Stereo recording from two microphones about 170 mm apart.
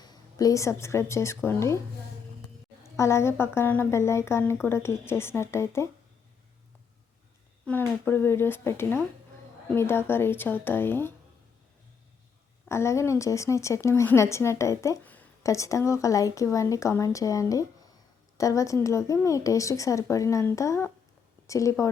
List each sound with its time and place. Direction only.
0.0 s a woman's voice: 20° left (ahead or behind)
3.0 s a woman's voice: 15° left (ahead or behind)
7.6 s a woman's voice: 10° left (ahead or behind)
12.6 s a woman's voice: 15° left (ahead or behind)